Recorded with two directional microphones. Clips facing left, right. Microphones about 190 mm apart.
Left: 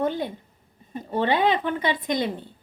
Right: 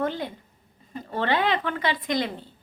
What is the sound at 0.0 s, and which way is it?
A woman's voice, 20° left (ahead or behind).